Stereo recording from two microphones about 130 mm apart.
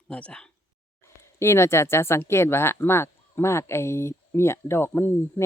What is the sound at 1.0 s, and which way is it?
Speech, 20° left (ahead or behind).